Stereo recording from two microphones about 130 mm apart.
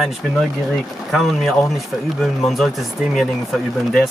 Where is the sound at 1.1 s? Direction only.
Centre (ahead or behind).